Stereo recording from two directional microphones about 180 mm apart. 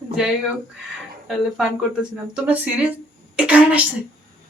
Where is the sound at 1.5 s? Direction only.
5° right (ahead or behind).